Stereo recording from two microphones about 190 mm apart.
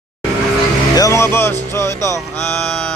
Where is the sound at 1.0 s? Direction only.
15° left (ahead or behind).